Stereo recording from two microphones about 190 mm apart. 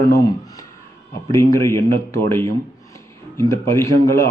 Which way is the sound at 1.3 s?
15° left (ahead or behind).